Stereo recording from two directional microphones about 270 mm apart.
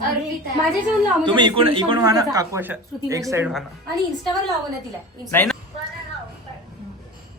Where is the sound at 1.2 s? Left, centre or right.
Centre.